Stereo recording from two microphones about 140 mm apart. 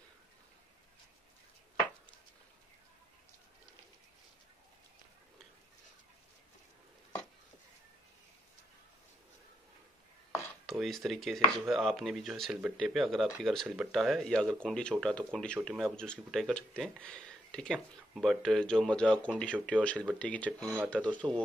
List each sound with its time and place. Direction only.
10.7 s speech: centre (ahead or behind)